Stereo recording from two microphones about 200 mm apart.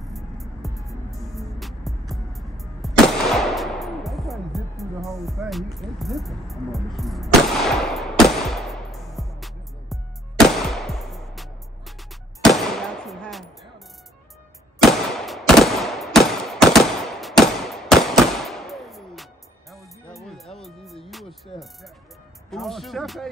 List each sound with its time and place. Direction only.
0.1 s music: centre (ahead or behind)
0.7 s music: 15° right (ahead or behind)
1.2 s music: centre (ahead or behind)
12.4 s firecracker: centre (ahead or behind)
14.8 s gunshot: centre (ahead or behind)
20.2 s music: centre (ahead or behind)
22.5 s speech: centre (ahead or behind)